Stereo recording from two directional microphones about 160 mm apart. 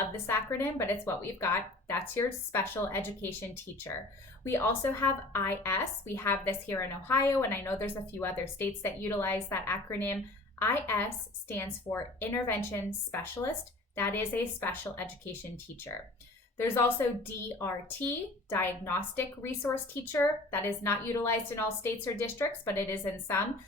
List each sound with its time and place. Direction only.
0.3 s speech: 15° left (ahead or behind)
4.4 s speech: 15° left (ahead or behind)
16.6 s speech: 15° left (ahead or behind)